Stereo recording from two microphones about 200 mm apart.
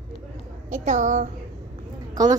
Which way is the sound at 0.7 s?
35° right (ahead or behind).